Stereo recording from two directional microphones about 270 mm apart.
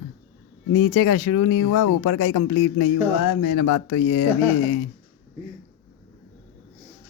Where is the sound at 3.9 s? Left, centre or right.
Left.